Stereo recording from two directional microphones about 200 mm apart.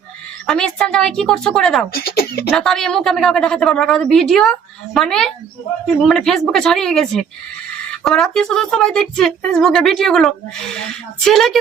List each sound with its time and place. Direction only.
0.4 s speech: 5° left (ahead or behind)
1.9 s speech: 50° left (ahead or behind)
2.5 s speech: centre (ahead or behind)